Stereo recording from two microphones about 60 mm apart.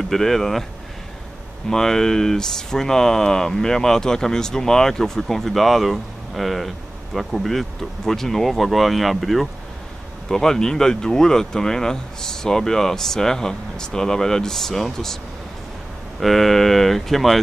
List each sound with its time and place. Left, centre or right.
0.1 s speech: centre
1.7 s speech: centre
16.2 s speech: centre